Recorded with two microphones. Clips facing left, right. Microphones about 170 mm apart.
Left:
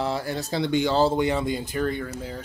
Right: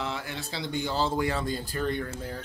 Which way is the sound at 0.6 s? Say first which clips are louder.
Left 8 dB; 80° left.